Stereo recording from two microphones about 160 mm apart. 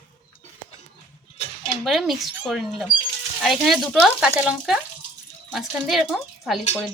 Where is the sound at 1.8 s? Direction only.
Centre (ahead or behind).